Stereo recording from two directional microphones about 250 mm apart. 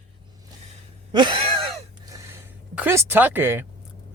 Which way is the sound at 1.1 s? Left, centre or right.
Centre.